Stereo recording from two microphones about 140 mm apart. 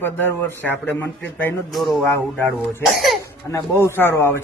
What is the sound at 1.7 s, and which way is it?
A woman's voice, centre (ahead or behind).